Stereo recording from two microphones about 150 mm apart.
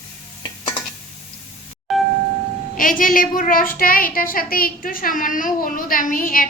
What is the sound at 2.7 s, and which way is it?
A child's voice, 65° left (ahead or behind).